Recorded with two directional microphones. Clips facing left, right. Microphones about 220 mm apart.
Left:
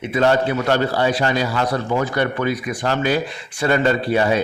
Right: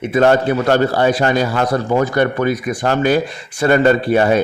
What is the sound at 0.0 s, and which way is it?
A man's voice, 50° right (ahead or behind).